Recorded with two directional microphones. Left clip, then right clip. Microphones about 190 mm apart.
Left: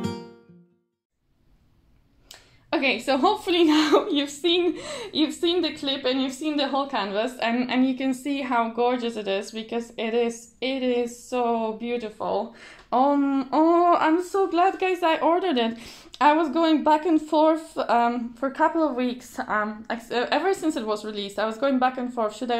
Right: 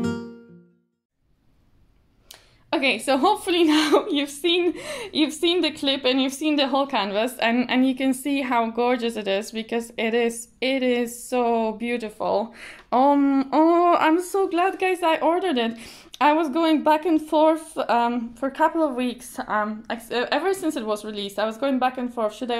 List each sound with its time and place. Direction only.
0.0 s music: centre (ahead or behind)
2.7 s a woman's voice: 20° right (ahead or behind)